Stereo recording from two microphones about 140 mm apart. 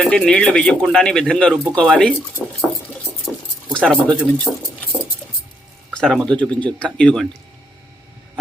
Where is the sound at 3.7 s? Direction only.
5° left (ahead or behind).